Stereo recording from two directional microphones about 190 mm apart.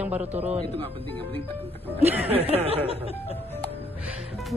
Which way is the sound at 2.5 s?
30° right (ahead or behind).